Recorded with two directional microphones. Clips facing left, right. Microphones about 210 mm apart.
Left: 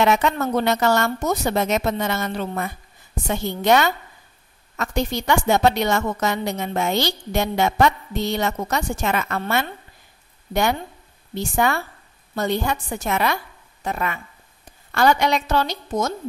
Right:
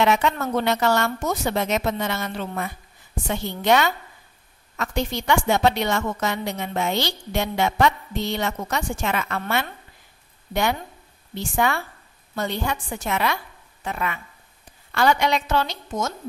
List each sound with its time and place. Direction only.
0.0 s a woman's voice: 45° left (ahead or behind)
10.5 s a woman's voice: 45° left (ahead or behind)